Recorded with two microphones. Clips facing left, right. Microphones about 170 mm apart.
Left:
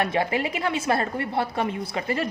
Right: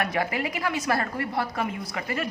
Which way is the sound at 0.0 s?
25° left (ahead or behind).